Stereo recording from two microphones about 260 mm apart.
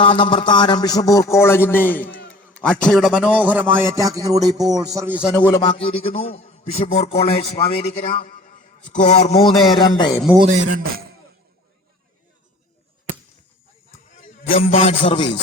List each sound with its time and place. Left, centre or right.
0.0 s a man's voice: centre
5.5 s a man's voice: centre
10.3 s speech: right
14.5 s a man's voice: left